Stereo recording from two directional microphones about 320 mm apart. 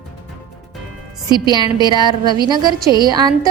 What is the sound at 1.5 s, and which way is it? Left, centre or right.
Speech, centre.